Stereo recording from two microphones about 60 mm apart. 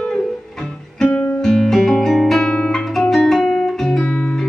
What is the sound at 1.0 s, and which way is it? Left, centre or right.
Guitar, left.